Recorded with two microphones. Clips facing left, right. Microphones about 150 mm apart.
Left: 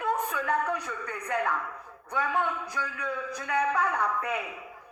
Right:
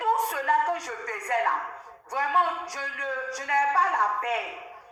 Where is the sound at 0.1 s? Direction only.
80° right.